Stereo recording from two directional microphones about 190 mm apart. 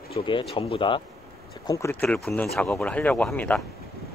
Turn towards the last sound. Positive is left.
turn(degrees=5)  # may be behind; listen again after turning